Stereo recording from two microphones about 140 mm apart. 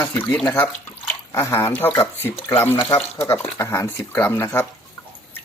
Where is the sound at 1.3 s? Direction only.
20° left (ahead or behind).